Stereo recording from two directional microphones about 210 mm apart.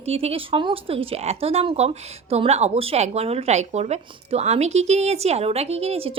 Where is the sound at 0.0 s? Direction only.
30° right (ahead or behind).